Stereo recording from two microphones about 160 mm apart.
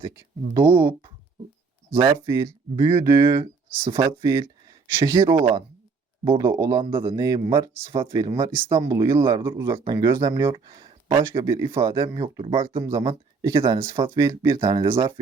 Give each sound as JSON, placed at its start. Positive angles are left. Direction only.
{"t": 0.5, "sound": "speech", "side_deg": -15}
{"t": 2.0, "sound": "speech", "side_deg": -30}
{"t": 11.3, "sound": "speech", "side_deg": -20}
{"t": 14.8, "sound": "speech", "side_deg": -15}